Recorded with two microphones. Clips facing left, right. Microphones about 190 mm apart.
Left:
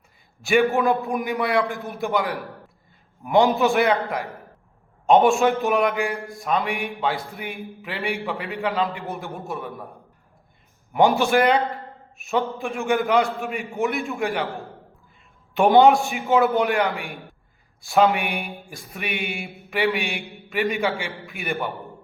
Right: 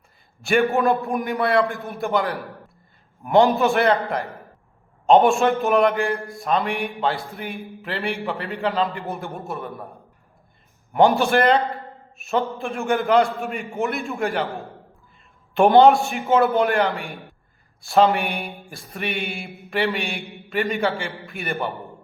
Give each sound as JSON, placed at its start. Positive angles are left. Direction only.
{"t": 0.4, "sound": "a man's voice", "side_deg": 5}
{"t": 10.9, "sound": "a man's voice", "side_deg": 5}
{"t": 15.6, "sound": "a man's voice", "side_deg": 0}
{"t": 17.9, "sound": "speech", "side_deg": 5}
{"t": 19.2, "sound": "mantra", "side_deg": 0}
{"t": 20.8, "sound": "a man's voice", "side_deg": 5}